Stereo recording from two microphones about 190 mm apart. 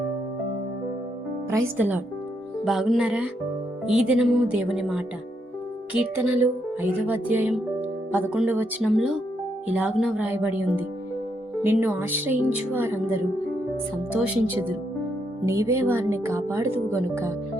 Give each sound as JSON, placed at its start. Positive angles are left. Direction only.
{"t": 1.5, "sound": "speech", "side_deg": -15}
{"t": 2.6, "sound": "speech", "side_deg": 0}